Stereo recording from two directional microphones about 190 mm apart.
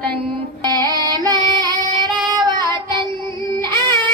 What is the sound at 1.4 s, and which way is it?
Female singing, 20° right (ahead or behind).